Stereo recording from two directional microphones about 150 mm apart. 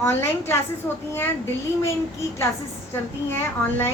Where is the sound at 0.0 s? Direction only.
15° left (ahead or behind).